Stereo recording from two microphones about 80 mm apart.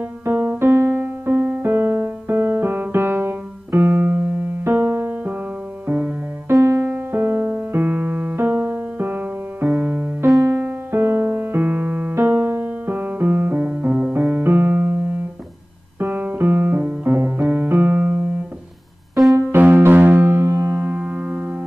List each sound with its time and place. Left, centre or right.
0.2 s music: right
5.9 s music: centre
6.5 s music: right
13.8 s keyboard: right
16.0 s music: right
17.0 s keyboard: right
19.5 s music: right